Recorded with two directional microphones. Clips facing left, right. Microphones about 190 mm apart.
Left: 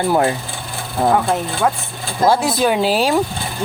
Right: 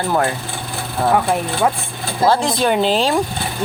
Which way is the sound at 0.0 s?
15° left (ahead or behind).